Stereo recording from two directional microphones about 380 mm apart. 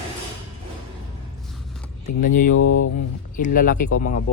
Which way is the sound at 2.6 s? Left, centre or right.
Left.